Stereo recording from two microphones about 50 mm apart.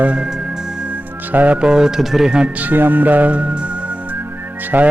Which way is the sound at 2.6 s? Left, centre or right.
Right.